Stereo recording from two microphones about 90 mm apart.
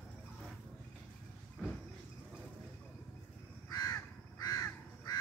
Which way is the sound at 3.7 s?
40° left (ahead or behind).